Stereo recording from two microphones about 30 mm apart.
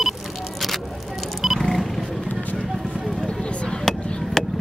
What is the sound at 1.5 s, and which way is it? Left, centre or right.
Vehicle, centre.